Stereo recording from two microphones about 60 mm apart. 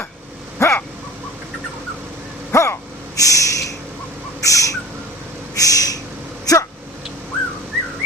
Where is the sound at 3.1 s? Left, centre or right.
Left.